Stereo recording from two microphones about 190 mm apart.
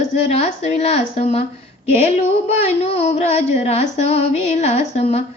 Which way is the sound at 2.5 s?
30° left (ahead or behind).